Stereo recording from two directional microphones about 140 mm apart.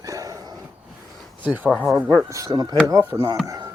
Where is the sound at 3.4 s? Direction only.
25° right (ahead or behind).